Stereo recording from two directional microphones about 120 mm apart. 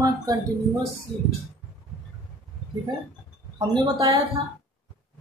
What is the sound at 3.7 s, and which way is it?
Speech, 40° right (ahead or behind).